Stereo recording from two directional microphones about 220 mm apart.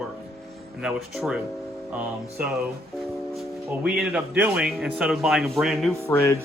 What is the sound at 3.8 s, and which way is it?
Speech, 5° right (ahead or behind).